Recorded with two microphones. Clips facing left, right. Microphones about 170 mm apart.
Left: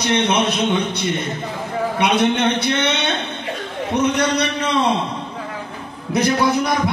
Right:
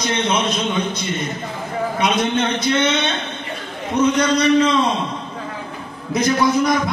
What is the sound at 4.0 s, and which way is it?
Speech, 65° left (ahead or behind).